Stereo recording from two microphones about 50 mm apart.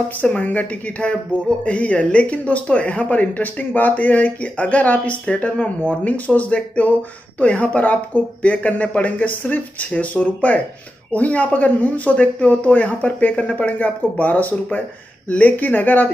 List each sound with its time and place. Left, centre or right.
0.2 s speech: left